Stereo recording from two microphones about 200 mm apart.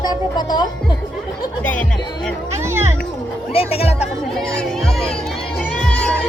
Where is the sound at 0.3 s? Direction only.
20° left (ahead or behind).